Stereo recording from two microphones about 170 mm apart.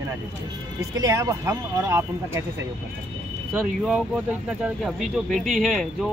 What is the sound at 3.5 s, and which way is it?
Speech, 5° right (ahead or behind).